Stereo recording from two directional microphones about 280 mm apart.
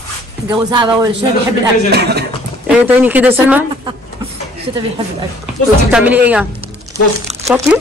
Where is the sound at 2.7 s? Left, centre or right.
Centre.